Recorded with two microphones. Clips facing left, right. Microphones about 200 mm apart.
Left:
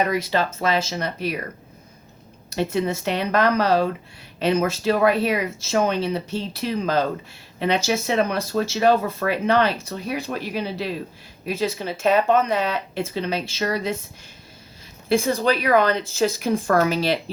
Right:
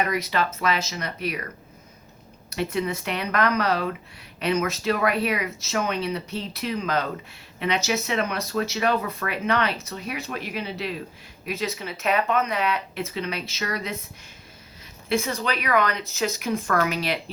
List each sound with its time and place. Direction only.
0.1 s speech: 30° left (ahead or behind)
2.5 s speech: 25° left (ahead or behind)
15.1 s speech: 30° left (ahead or behind)